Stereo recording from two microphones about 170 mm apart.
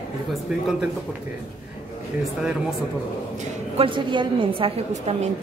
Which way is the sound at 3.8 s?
30° right (ahead or behind).